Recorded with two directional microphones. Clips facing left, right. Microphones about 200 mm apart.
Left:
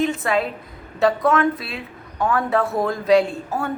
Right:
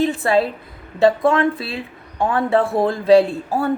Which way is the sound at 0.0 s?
30° right (ahead or behind).